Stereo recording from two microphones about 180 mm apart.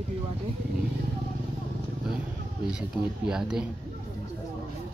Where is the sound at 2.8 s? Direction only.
5° right (ahead or behind).